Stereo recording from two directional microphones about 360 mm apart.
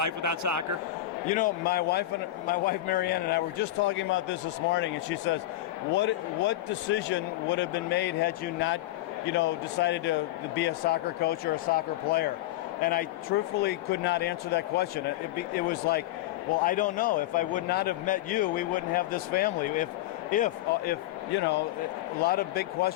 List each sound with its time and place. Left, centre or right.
0.0 s speech: right
1.3 s a man's voice: left